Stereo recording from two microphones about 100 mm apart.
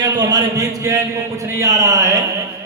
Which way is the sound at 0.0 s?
40° right (ahead or behind).